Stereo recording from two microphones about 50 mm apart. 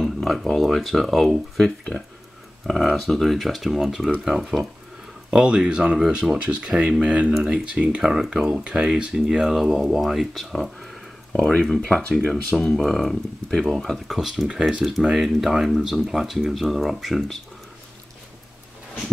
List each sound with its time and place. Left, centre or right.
0.0 s speech: centre
6.3 s speech: right
7.3 s speech: centre